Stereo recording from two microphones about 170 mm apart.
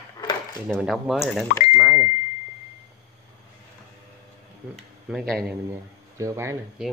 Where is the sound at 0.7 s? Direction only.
Centre (ahead or behind).